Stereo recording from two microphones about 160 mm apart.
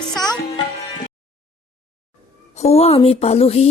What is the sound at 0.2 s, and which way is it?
Music, 25° left (ahead or behind).